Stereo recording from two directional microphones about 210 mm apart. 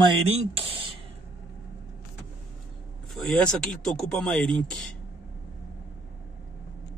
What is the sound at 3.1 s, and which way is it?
Speech, 5° left (ahead or behind).